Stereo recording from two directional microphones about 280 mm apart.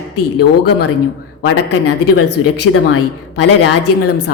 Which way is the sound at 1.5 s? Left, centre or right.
Left.